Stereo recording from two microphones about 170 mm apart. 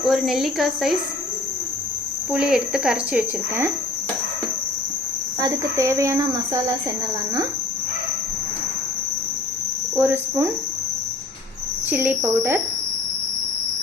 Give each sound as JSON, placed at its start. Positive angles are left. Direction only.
{"t": 0.0, "sound": "speech", "side_deg": 0}
{"t": 2.3, "sound": "speech", "side_deg": -5}
{"t": 5.4, "sound": "cricket", "side_deg": -20}
{"t": 9.9, "sound": "speech", "side_deg": -10}
{"t": 11.9, "sound": "speech", "side_deg": -10}